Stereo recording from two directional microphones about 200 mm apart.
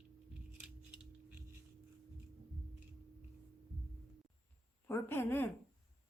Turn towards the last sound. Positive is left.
turn(degrees=10)  # may be behind; listen again after turning